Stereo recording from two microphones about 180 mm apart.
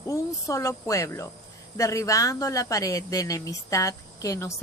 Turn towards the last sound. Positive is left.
turn(degrees=15)  # may be behind; listen again after turning